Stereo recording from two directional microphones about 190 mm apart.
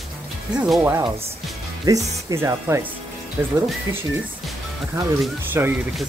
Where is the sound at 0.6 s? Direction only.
10° right (ahead or behind).